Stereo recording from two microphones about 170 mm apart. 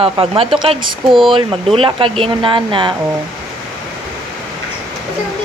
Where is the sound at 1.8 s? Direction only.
30° right (ahead or behind).